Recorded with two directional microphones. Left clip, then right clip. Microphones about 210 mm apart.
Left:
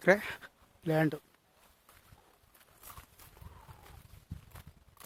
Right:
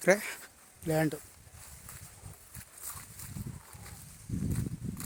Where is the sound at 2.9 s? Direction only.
10° right (ahead or behind).